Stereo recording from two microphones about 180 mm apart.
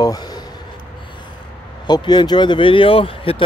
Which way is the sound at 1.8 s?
25° left (ahead or behind).